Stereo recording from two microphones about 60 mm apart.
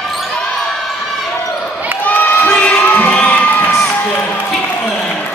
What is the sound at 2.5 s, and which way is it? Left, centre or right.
Crowd, left.